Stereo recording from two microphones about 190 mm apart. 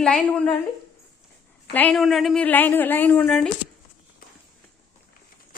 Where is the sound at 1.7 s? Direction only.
5° left (ahead or behind).